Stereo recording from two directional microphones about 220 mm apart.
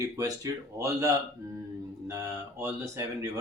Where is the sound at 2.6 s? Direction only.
15° right (ahead or behind).